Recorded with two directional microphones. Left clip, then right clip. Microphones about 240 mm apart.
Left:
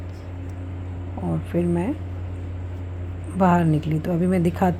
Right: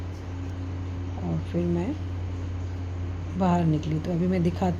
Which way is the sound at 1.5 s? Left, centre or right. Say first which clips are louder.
Left 5 dB; centre.